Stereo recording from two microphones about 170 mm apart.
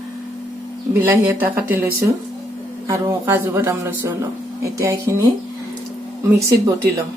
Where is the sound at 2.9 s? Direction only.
15° right (ahead or behind).